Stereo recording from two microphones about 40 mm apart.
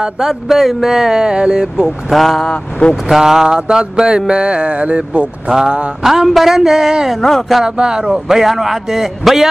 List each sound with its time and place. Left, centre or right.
0.2 s speech: centre
2.0 s speech: centre
2.4 s speech: left
3.1 s speech: centre; by 5.3 s right
6.0 s speech: centre
7.2 s speech: centre
7.6 s speech: right
8.1 s speech: centre